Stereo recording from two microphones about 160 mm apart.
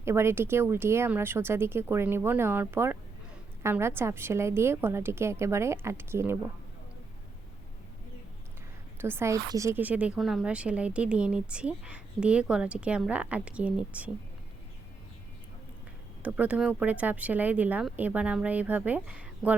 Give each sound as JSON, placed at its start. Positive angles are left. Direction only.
{"t": 0.0, "sound": "a woman's voice", "side_deg": -15}
{"t": 9.0, "sound": "a woman's voice", "side_deg": -15}
{"t": 16.2, "sound": "a woman's voice", "side_deg": -10}